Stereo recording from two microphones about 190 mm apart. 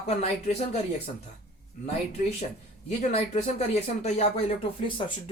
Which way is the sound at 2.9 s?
35° left (ahead or behind).